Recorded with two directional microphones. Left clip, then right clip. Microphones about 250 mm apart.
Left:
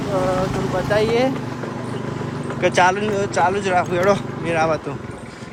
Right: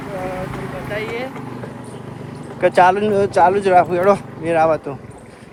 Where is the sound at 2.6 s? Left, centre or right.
Centre.